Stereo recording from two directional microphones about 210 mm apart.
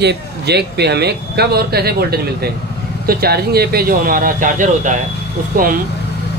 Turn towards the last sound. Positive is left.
turn(degrees=-40)  # may be behind; listen again after turning